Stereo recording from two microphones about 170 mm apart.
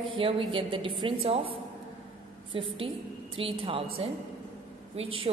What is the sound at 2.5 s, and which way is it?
A woman's voice, 30° right (ahead or behind).